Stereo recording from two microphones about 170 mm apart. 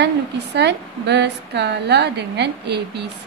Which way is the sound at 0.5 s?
85° right.